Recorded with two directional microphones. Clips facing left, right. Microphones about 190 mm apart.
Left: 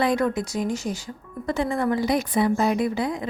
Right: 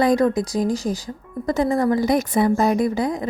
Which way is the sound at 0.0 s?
40° right (ahead or behind).